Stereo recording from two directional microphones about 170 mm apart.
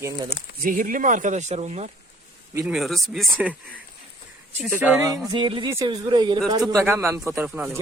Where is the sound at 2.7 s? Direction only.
Centre (ahead or behind).